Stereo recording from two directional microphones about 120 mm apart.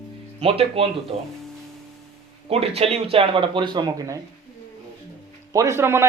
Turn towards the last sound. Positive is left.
turn(degrees=-20)  # may be behind; listen again after turning